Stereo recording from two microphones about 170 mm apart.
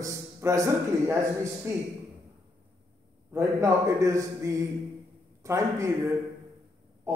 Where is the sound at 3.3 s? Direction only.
15° right (ahead or behind).